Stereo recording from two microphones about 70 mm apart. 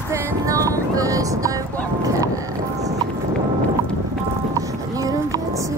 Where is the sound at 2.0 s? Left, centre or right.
Right.